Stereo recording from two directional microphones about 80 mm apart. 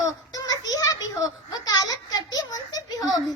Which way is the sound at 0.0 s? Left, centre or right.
Left.